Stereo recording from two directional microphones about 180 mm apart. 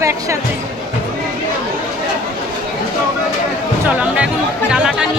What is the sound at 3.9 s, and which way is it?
Speech, 5° right (ahead or behind).